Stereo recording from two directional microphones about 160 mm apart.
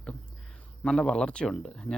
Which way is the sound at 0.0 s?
5° left (ahead or behind).